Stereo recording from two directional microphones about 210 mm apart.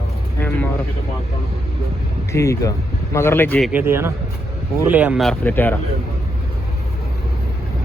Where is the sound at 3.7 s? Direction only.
10° right (ahead or behind); by 5.8 s 10° left (ahead or behind).